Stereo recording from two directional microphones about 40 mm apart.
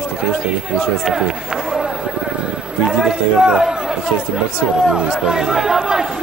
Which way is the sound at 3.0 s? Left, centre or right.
Centre.